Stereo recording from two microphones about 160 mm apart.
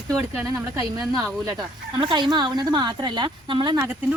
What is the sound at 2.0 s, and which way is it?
A woman's voice, 30° right (ahead or behind).